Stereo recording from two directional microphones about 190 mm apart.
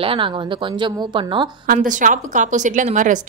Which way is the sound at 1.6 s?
45° right (ahead or behind).